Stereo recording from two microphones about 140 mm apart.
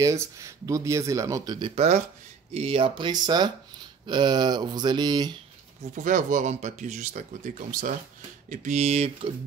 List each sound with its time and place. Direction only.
0.0 s speech: 20° right (ahead or behind)
2.5 s speech: 45° right (ahead or behind)
5.9 s speech: 70° right (ahead or behind)
8.5 s speech: 55° right (ahead or behind)